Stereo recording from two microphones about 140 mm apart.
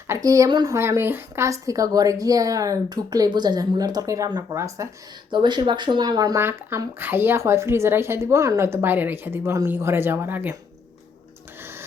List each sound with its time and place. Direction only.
0.1 s speech: 25° right (ahead or behind)
5.3 s speech: 35° right (ahead or behind); by 10.5 s 15° right (ahead or behind)
11.6 s printer: 15° right (ahead or behind)